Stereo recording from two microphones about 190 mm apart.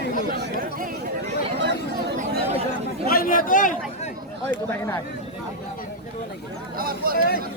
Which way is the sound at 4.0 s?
35° left (ahead or behind).